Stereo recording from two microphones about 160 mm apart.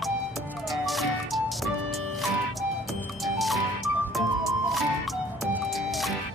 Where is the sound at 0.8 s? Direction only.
Centre (ahead or behind).